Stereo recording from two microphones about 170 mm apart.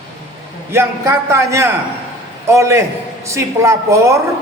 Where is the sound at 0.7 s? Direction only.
15° right (ahead or behind).